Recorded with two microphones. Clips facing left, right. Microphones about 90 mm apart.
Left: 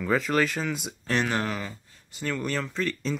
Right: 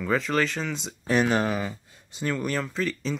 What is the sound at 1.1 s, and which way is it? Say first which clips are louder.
Speech: right 4 dB; 15° right (ahead or behind).